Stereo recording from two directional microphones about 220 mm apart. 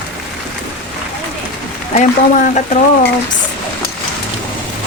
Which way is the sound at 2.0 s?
30° left (ahead or behind).